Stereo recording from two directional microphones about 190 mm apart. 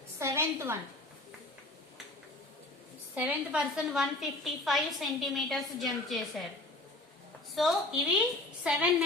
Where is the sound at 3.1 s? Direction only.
5° right (ahead or behind).